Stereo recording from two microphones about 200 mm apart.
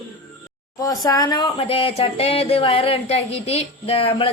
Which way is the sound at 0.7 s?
20° left (ahead or behind).